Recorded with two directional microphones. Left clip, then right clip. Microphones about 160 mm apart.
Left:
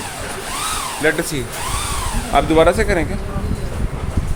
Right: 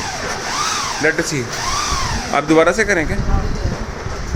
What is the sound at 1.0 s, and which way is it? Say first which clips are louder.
Speech: even; 10° left (ahead or behind).